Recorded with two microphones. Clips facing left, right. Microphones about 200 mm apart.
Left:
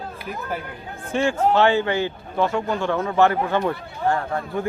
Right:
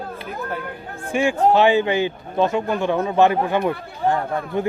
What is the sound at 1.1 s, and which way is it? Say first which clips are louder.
A man's voice: right 2 dB; 10° right (ahead or behind).